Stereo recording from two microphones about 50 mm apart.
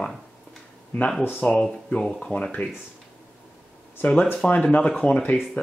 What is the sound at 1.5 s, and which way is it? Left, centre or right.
Speech, centre.